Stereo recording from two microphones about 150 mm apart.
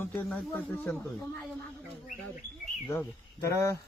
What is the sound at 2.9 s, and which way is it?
Speech, 20° left (ahead or behind).